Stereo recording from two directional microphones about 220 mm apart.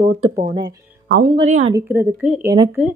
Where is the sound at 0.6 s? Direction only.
40° right (ahead or behind).